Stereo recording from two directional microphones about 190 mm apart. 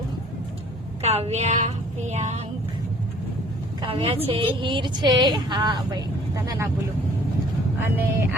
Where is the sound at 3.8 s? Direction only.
30° right (ahead or behind).